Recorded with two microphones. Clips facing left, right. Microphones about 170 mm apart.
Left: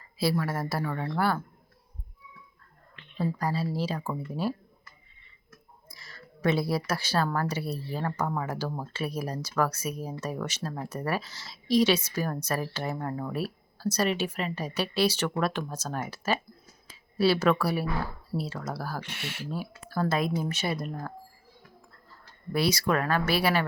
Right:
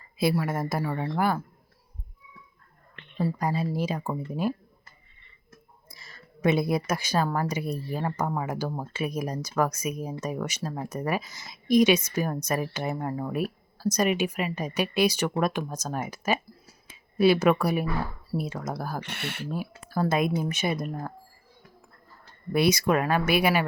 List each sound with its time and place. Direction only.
0.2 s speech: 20° right (ahead or behind)
3.3 s speech: 20° right (ahead or behind)
5.5 s a sound: 25° right (ahead or behind)
7.3 s speech: 15° right (ahead or behind)
19.0 s speech: 60° right (ahead or behind)
19.5 s speech: 15° right (ahead or behind)
22.1 s speech: 20° right (ahead or behind)